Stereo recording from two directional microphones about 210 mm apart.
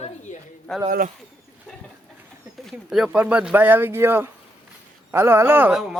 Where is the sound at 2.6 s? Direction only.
Centre (ahead or behind).